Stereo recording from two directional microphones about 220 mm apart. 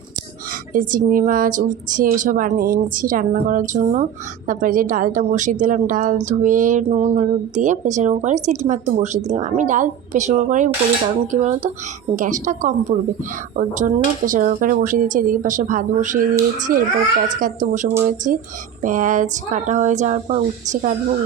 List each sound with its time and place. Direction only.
0.7 s a woman's voice: 40° right (ahead or behind)